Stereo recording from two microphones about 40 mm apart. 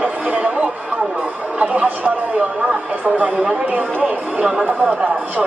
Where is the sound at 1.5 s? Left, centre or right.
Right.